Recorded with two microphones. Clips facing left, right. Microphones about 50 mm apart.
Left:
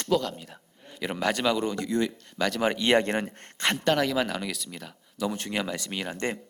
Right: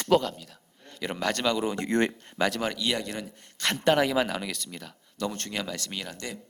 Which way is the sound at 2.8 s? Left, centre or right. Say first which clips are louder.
Left 7 dB; left.